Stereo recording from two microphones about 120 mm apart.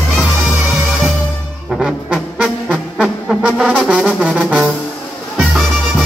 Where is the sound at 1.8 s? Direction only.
5° right (ahead or behind).